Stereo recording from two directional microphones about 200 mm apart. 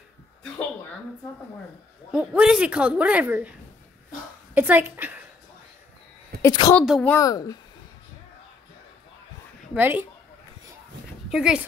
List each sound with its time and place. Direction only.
2.1 s a woman's voice: 5° right (ahead or behind)
4.6 s a woman's voice: 10° right (ahead or behind)
6.4 s a woman's voice: 20° left (ahead or behind)
6.8 s speech: 5° left (ahead or behind)
7.2 s speech: 15° left (ahead or behind)
9.8 s a woman's voice: 10° right (ahead or behind)
11.2 s speech: 5° right (ahead or behind)